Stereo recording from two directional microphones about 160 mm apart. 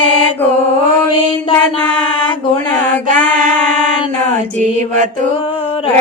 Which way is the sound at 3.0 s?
55° right (ahead or behind).